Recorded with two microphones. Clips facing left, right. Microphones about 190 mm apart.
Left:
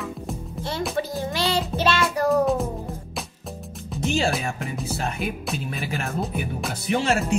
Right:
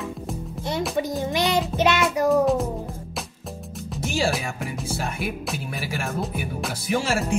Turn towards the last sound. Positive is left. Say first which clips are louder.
# left 1 dB
turn(degrees=0)  # may be behind; listen again after turning